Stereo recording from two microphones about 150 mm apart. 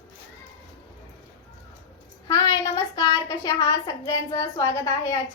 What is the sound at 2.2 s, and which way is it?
A child's voice, 25° left (ahead or behind).